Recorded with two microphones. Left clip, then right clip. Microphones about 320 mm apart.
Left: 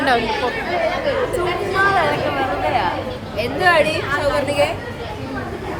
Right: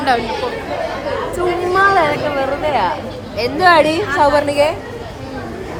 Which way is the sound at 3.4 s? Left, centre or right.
Right.